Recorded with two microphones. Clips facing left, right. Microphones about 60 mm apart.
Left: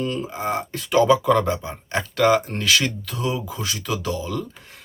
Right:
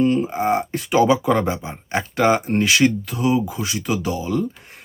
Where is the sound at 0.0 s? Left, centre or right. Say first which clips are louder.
Right 7 dB; right.